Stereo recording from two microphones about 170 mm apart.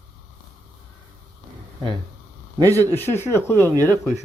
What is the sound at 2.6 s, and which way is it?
Speech, 20° right (ahead or behind).